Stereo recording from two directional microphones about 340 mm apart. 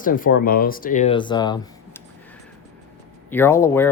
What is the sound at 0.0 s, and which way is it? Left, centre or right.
Speech, left.